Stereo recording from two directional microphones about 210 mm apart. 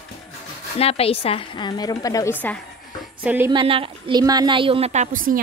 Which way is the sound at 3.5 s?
25° right (ahead or behind).